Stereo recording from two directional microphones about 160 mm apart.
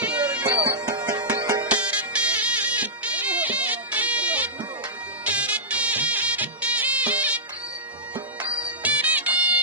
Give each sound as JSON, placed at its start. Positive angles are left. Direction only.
{"t": 0.0, "sound": "music", "side_deg": -10}
{"t": 0.6, "sound": "music", "side_deg": -25}
{"t": 1.6, "sound": "music", "side_deg": -10}
{"t": 8.8, "sound": "music", "side_deg": -10}